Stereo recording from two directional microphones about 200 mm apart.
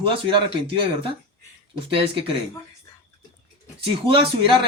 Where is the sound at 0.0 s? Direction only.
25° right (ahead or behind).